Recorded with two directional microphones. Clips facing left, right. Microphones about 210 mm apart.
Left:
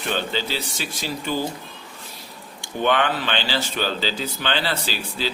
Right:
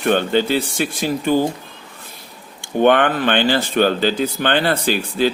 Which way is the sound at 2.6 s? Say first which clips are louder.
Right 7 dB; 55° right (ahead or behind).